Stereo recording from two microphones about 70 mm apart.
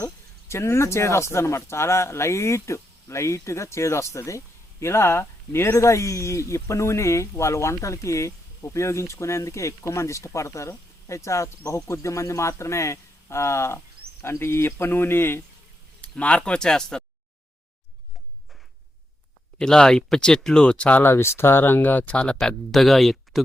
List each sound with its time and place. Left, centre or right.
0.0 s a sound: left
0.9 s speech: left
16.0 s speech: centre
19.5 s speech: centre
21.0 s speech: left; by 23.4 s centre